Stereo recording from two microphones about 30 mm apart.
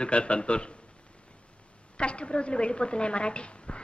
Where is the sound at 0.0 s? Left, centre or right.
Left.